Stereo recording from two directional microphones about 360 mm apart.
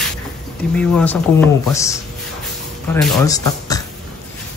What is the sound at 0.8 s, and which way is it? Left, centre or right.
Speech, centre.